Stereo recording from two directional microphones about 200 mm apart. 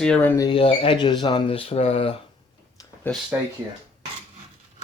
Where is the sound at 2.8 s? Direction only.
20° left (ahead or behind).